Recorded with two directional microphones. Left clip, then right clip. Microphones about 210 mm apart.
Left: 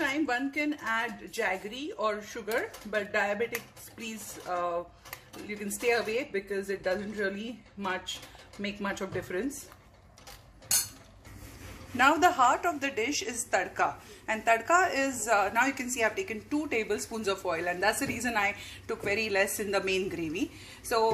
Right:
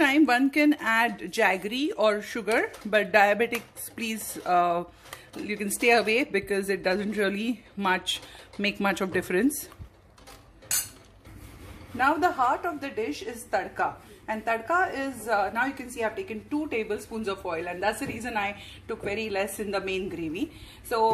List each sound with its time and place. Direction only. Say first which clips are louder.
0.0 s speech: right 8 dB; 35° right (ahead or behind)
12.0 s a woman's voice: left 1 dB; centre (ahead or behind)